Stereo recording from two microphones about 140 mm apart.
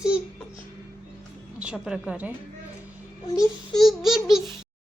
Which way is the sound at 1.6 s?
5° right (ahead or behind).